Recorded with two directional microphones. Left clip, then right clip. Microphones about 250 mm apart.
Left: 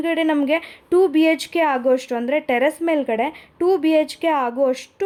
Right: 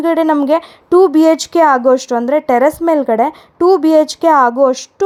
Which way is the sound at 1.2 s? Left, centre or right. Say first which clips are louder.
Right 8 dB; right.